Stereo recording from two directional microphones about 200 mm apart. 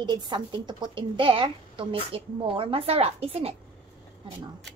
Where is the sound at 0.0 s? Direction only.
20° right (ahead or behind).